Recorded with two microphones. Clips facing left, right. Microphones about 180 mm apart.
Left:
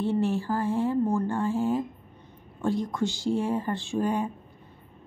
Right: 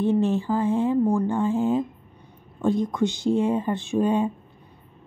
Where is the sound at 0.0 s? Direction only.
20° right (ahead or behind).